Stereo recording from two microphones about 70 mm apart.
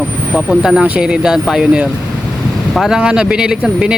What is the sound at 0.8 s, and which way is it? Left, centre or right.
Speech, centre.